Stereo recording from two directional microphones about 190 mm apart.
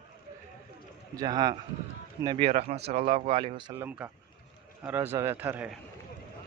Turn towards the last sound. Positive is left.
turn(degrees=-10)  # may be behind; listen again after turning